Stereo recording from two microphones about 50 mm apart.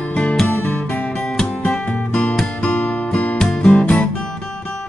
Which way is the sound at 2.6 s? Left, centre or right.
Left.